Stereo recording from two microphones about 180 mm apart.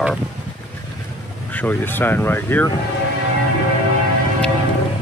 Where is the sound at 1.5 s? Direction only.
10° left (ahead or behind).